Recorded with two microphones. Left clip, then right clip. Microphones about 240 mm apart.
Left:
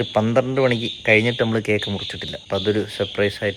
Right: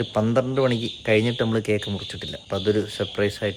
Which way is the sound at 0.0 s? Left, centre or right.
Centre.